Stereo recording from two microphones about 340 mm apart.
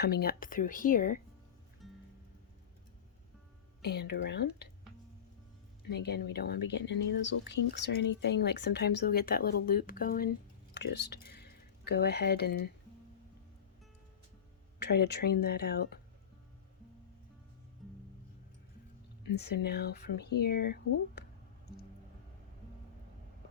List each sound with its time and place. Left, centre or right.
0.0 s speech: left
1.8 s music: centre
3.8 s speech: left
5.9 s speech: left
14.8 s speech: left
19.4 s speech: left